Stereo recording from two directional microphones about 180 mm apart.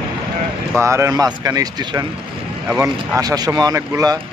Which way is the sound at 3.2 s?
20° right (ahead or behind).